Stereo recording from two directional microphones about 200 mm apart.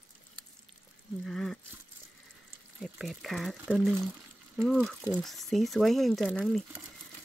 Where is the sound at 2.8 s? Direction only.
Centre (ahead or behind).